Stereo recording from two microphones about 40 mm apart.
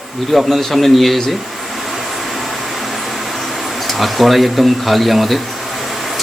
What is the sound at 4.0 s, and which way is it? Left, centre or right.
Speech, centre.